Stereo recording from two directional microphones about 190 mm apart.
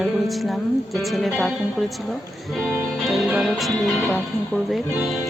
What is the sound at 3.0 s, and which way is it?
Music, centre (ahead or behind).